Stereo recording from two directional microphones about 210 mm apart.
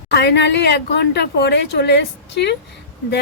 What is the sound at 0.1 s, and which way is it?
A woman's voice, 55° left (ahead or behind).